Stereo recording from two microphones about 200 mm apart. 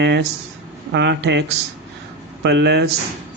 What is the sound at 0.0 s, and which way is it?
Speech, 60° right (ahead or behind).